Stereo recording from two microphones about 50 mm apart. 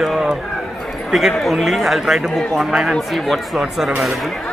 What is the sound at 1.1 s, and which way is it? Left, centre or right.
Speech, centre.